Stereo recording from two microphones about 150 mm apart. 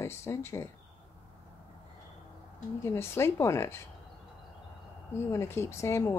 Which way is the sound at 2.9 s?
15° left (ahead or behind).